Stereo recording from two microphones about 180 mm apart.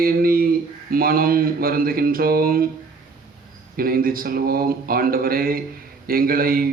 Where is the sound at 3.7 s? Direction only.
55° right (ahead or behind).